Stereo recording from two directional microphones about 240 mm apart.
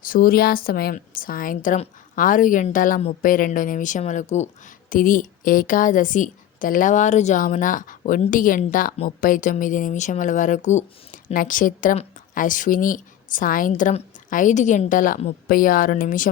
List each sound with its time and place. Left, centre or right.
0.0 s a woman's voice: left